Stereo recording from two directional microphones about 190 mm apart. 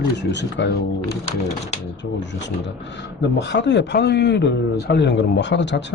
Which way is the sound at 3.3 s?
65° left (ahead or behind).